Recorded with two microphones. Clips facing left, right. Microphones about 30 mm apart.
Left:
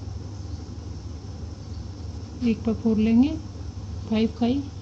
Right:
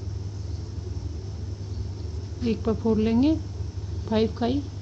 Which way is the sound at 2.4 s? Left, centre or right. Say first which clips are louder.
Left 1 dB; centre.